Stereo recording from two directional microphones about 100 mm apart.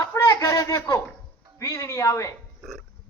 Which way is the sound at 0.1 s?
25° left (ahead or behind).